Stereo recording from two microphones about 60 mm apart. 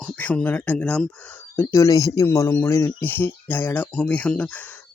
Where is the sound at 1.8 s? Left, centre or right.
Left.